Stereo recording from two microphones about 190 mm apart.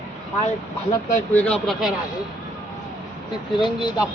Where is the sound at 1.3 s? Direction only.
5° left (ahead or behind).